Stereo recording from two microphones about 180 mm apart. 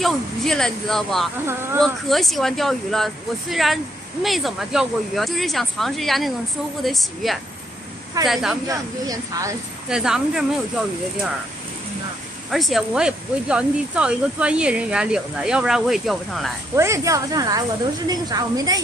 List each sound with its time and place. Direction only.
0.0 s speech: 5° left (ahead or behind)
8.6 s speech: 20° right (ahead or behind)
9.8 s speech: 5° right (ahead or behind)
12.4 s speech: centre (ahead or behind)
16.7 s speech: 15° right (ahead or behind)